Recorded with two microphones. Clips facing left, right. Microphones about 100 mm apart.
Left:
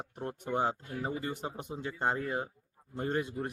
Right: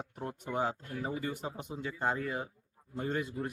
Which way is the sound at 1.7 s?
25° left (ahead or behind).